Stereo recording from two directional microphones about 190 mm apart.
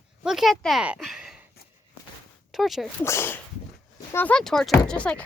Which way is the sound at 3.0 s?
15° left (ahead or behind).